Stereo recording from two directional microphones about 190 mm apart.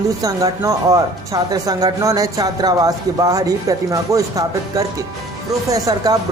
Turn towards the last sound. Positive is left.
turn(degrees=-20)  # may be behind; listen again after turning